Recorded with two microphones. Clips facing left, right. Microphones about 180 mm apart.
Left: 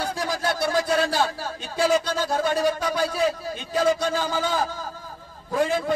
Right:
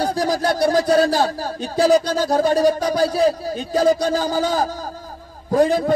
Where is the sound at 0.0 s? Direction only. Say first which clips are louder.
Right 7 dB; 40° right (ahead or behind).